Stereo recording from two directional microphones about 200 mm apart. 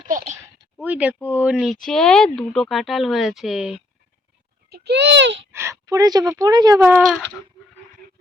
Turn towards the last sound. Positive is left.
turn(degrees=-10)  # may be behind; listen again after turning